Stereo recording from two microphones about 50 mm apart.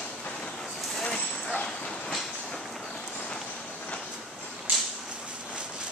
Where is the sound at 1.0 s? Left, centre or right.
Centre.